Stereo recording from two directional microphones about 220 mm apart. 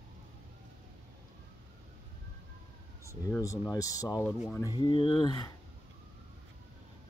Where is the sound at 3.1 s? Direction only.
15° left (ahead or behind).